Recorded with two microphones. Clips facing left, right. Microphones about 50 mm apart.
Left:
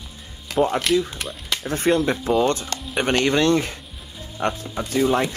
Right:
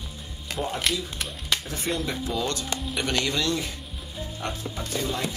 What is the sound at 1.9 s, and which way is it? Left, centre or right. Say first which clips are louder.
Speech: left 10 dB; left.